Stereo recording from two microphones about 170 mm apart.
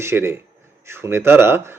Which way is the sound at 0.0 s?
15° right (ahead or behind).